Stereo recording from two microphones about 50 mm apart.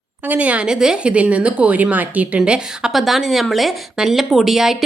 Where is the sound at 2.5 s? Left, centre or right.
Centre.